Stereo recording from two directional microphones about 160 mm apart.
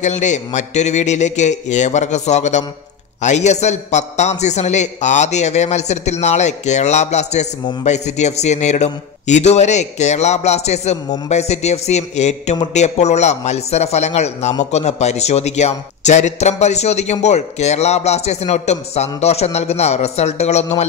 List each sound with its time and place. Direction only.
0.0 s a man's voice: 50° left (ahead or behind)